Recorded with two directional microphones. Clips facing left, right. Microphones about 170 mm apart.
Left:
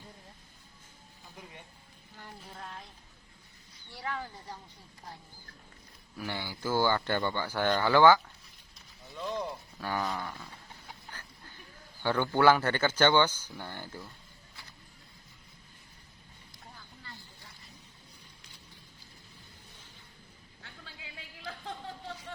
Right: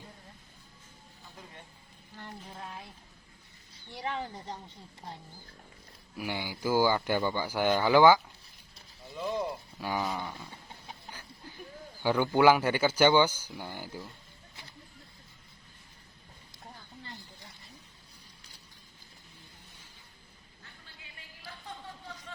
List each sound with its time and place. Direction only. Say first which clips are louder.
2.5 s speech: left 1 dB; 10° right (ahead or behind)
3.9 s speech: right 3 dB; 20° right (ahead or behind)
6.1 s speech: right 2 dB; 15° right (ahead or behind)
9.1 s a sound: right 3 dB; 5° right (ahead or behind)
12.0 s speech: right 1 dB; 10° right (ahead or behind)
20.6 s a sound: left 6 dB; 90° left